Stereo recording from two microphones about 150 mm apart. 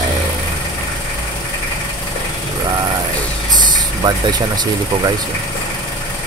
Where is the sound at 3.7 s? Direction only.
30° right (ahead or behind).